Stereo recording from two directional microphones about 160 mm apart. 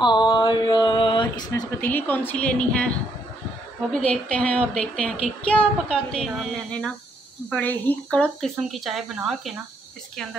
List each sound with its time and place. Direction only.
0.0 s a sound: 25° left (ahead or behind)
1.8 s a woman's voice: 10° left (ahead or behind)
3.9 s a woman's voice: 5° left (ahead or behind)